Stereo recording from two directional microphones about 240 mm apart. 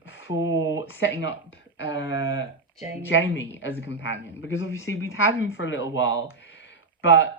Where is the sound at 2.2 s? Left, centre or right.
Centre.